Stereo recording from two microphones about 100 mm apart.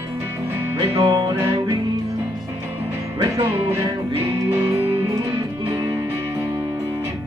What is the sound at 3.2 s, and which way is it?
Music, 40° right (ahead or behind).